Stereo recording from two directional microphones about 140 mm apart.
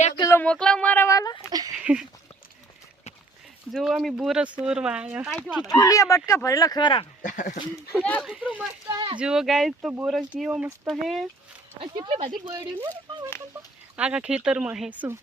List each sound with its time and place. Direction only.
0.2 s a sound: 20° left (ahead or behind)
0.4 s speech: 5° left (ahead or behind); by 1.5 s 25° left (ahead or behind)
1.5 s speech: 25° right (ahead or behind)
1.8 s a sound: 10° right (ahead or behind)
3.7 s speech: 5° right (ahead or behind)
5.3 s speech: 5° left (ahead or behind)
5.6 s speech: 25° left (ahead or behind)
7.2 s speech: 65° left (ahead or behind)
8.0 s speech: 10° left (ahead or behind)
8.3 s speech: 5° right (ahead or behind)
8.9 s speech: 30° right (ahead or behind)
9.1 s speech: 5° right (ahead or behind)
11.8 s speech: 40° right (ahead or behind)
13.9 s speech: 10° right (ahead or behind)